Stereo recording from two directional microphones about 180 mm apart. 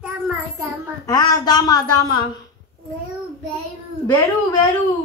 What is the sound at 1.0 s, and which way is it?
Speech, 25° left (ahead or behind).